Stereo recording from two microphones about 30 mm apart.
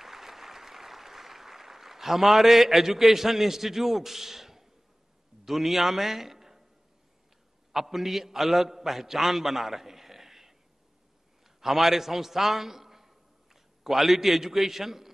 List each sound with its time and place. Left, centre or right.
0.0 s applause: centre
5.4 s a man's voice: centre
7.7 s a man's voice: centre